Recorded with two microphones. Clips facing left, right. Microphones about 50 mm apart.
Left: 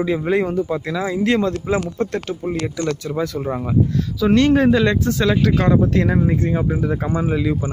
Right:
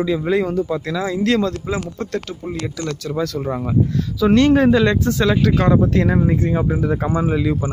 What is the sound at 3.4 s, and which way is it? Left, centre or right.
Speech, centre.